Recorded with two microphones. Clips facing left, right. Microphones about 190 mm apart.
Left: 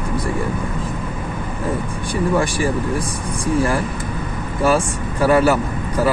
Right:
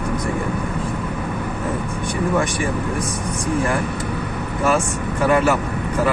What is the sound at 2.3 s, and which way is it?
Speech, 35° left (ahead or behind).